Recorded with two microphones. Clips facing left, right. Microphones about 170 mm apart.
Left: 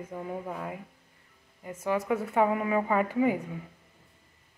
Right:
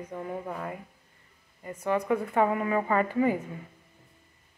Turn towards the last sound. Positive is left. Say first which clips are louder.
# even
turn(degrees=10)  # may be behind; listen again after turning